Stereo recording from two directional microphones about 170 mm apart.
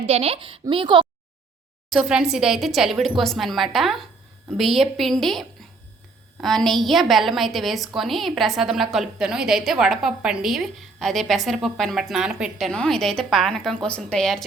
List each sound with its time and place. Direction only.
0.0 s speech: 35° right (ahead or behind)
1.9 s a woman's voice: 5° right (ahead or behind)